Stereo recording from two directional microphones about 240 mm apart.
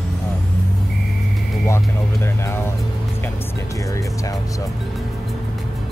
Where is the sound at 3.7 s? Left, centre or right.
Centre.